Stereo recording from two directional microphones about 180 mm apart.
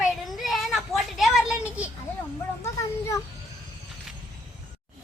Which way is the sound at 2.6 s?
15° left (ahead or behind).